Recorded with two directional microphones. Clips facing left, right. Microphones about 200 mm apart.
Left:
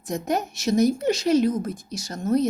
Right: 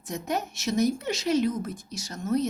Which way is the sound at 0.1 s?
35° left (ahead or behind).